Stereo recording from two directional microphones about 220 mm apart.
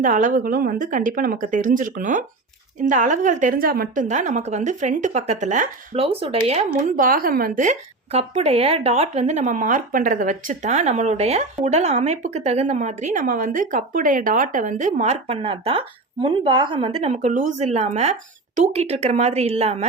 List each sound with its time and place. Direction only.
0.0 s a woman's voice: 35° right (ahead or behind)
6.9 s a woman's voice: 40° right (ahead or behind)